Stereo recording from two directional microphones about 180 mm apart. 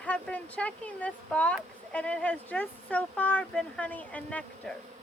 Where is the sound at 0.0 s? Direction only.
5° left (ahead or behind).